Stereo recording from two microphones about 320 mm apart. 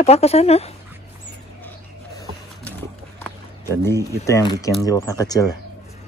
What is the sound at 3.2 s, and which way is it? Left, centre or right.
Speech, centre.